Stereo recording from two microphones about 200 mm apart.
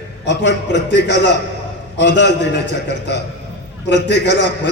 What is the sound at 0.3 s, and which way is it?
A man's voice, 60° left (ahead or behind).